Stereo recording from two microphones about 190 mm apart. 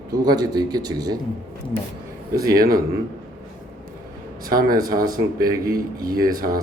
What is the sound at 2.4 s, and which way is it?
Speech, 50° right (ahead or behind).